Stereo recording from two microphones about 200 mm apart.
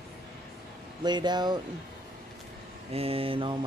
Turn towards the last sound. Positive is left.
turn(degrees=-25)  # may be behind; listen again after turning